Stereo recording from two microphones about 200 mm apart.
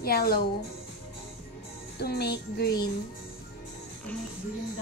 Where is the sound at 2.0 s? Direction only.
55° left (ahead or behind).